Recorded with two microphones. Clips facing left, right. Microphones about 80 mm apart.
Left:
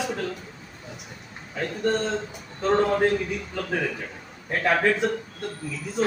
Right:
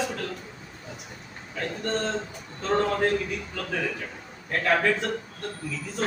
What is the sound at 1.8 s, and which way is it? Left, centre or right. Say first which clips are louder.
A man's voice: left 4 dB; centre.